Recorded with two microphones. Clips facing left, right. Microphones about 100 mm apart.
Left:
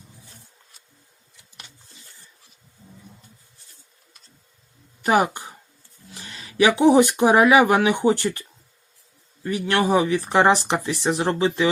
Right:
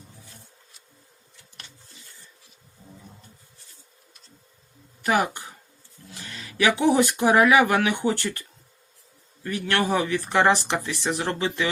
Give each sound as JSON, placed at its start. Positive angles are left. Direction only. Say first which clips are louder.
{"t": 5.0, "sound": "speech", "louder": "left 4 dB", "side_deg": 20}